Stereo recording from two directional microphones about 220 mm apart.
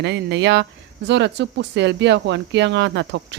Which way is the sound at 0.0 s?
50° right (ahead or behind).